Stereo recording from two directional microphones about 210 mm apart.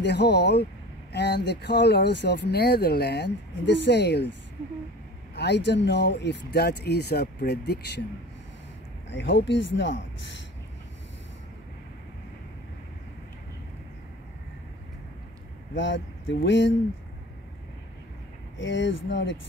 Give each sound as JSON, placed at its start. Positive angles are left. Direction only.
{"t": 0.0, "sound": "speech", "side_deg": 55}
{"t": 5.3, "sound": "speech", "side_deg": 55}
{"t": 9.1, "sound": "speech", "side_deg": 60}
{"t": 15.7, "sound": "speech", "side_deg": 60}
{"t": 18.6, "sound": "speech", "side_deg": 60}